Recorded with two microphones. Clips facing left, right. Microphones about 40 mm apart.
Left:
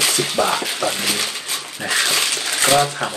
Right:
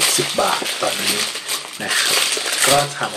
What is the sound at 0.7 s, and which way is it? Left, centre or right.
Speech, right.